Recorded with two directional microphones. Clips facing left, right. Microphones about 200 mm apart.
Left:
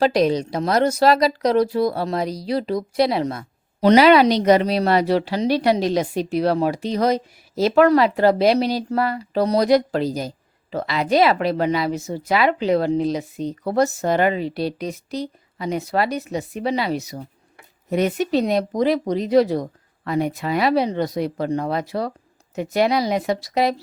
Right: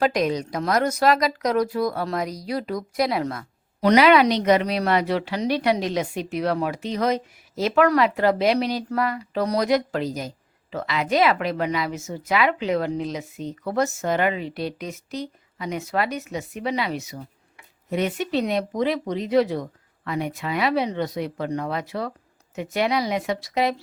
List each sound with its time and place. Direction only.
0.0 s a woman's voice: 30° left (ahead or behind)